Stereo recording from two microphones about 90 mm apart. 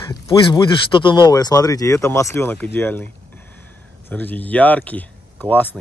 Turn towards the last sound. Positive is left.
turn(degrees=20)  # may be behind; listen again after turning